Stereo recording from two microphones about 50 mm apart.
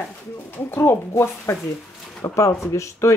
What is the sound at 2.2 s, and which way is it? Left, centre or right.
Speech, left.